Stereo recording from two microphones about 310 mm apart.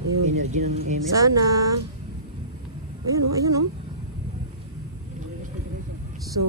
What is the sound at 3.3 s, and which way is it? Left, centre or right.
Speech, centre.